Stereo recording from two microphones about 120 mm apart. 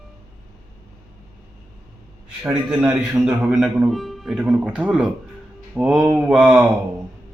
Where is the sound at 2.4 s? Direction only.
5° right (ahead or behind).